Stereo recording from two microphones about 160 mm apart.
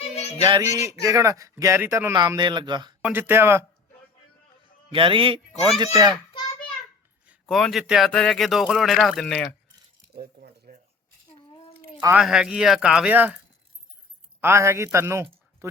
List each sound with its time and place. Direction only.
0.1 s music: 40° left (ahead or behind)
0.6 s speech: 20° right (ahead or behind)
3.0 s speech: 10° right (ahead or behind)
4.9 s a man's voice: 30° right (ahead or behind)
7.4 s speech: centre (ahead or behind)
10.2 s cutlery: 70° right (ahead or behind)
12.1 s speech: 5° right (ahead or behind)
14.4 s a man's voice: 15° right (ahead or behind)